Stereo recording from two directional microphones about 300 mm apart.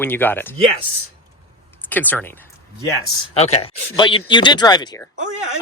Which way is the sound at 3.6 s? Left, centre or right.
Centre.